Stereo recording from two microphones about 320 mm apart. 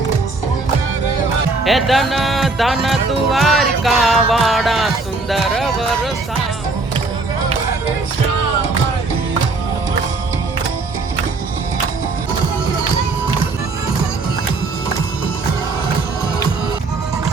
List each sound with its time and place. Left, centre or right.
1.6 s music: centre
5.3 s speech: centre